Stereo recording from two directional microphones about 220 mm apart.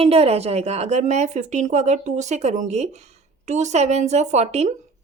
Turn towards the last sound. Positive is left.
turn(degrees=-30)  # may be behind; listen again after turning